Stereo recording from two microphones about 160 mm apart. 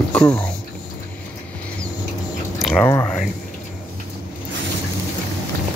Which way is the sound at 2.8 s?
20° left (ahead or behind).